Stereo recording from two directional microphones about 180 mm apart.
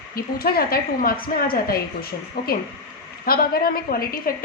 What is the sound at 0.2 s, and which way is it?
A woman's voice, 55° left (ahead or behind).